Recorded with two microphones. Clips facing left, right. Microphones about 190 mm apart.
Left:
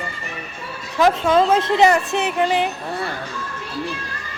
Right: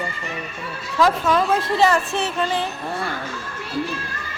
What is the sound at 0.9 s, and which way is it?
A woman's voice, 20° left (ahead or behind).